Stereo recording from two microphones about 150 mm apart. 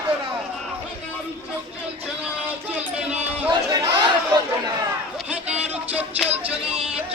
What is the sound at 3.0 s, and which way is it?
Run, 5° right (ahead or behind).